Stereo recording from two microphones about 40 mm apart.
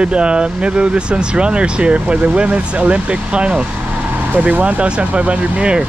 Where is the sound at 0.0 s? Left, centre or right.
Right.